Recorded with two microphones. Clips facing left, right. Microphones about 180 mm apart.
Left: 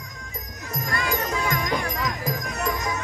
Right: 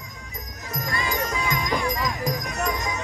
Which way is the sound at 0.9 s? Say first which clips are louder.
Left 1 dB; 55° left (ahead or behind).